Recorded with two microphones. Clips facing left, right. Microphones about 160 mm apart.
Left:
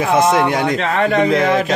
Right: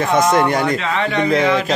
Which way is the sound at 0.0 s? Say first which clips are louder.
Left 1 dB; 5° left (ahead or behind).